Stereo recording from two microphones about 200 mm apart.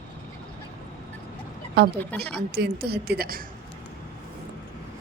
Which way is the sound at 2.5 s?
55° right (ahead or behind).